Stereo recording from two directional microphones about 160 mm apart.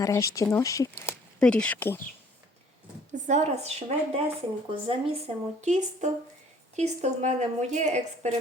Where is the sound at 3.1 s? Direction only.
45° right (ahead or behind).